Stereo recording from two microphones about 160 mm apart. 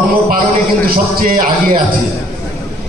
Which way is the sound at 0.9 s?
65° right (ahead or behind).